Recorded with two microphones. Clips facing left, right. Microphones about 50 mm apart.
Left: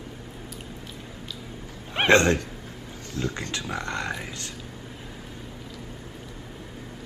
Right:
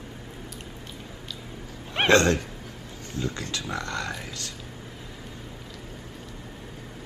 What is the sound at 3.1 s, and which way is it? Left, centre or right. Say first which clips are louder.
Speech: left 1 dB; right.